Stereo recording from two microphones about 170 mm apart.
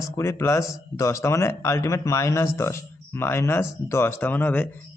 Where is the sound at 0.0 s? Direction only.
15° left (ahead or behind).